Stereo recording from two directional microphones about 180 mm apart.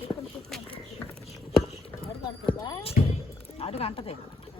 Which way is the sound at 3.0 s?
45° left (ahead or behind).